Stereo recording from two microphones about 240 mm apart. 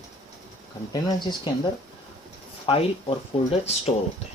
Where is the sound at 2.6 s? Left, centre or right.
Left.